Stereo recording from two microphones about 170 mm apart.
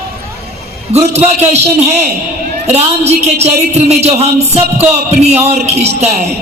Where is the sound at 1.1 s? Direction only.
40° right (ahead or behind).